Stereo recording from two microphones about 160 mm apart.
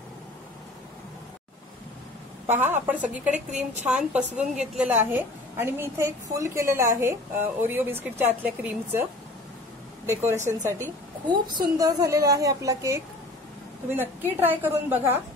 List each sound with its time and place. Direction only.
2.4 s a woman's voice: 15° right (ahead or behind)
10.0 s a woman's voice: 15° right (ahead or behind)
14.3 s a woman's voice: 10° right (ahead or behind)